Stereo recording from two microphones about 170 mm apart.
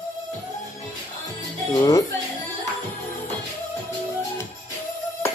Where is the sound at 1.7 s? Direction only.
20° left (ahead or behind).